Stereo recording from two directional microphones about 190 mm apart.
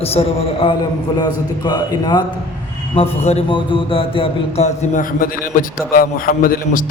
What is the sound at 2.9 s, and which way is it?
Music, 30° left (ahead or behind).